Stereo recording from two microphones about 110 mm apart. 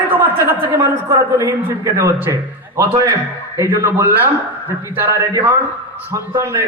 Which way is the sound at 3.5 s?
25° right (ahead or behind).